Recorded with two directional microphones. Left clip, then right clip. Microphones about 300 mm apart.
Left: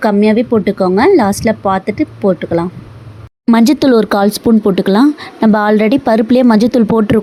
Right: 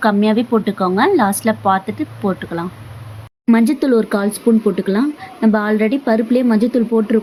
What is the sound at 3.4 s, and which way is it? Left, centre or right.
Speech, left.